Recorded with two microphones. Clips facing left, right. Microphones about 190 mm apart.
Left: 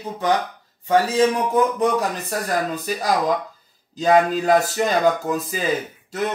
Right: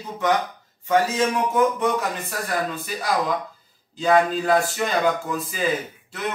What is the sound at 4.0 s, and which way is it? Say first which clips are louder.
Speech: left 2 dB; 40° left (ahead or behind).